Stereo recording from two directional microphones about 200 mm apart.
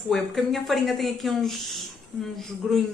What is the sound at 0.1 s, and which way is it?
Speech, centre (ahead or behind).